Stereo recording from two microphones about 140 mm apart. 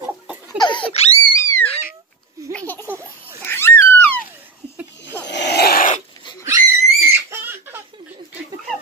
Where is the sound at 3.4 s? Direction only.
15° left (ahead or behind).